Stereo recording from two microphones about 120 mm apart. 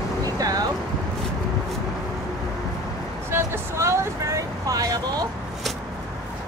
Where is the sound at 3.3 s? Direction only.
20° right (ahead or behind).